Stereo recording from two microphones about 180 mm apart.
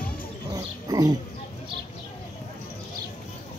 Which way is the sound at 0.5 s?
20° right (ahead or behind).